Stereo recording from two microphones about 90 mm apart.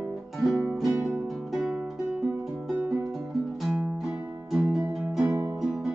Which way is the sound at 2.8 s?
20° right (ahead or behind).